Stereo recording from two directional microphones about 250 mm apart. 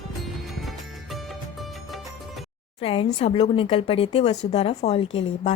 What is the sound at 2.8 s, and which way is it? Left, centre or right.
Speech, left.